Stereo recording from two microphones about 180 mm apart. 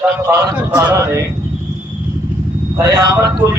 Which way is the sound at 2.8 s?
20° right (ahead or behind).